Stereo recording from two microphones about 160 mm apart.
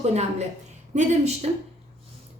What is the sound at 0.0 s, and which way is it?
Speech, 45° right (ahead or behind).